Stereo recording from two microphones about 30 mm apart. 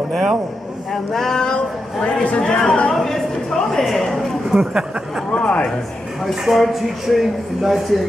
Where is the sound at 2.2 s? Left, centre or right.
Left.